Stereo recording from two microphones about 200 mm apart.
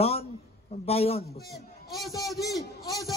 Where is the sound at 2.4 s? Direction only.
15° left (ahead or behind).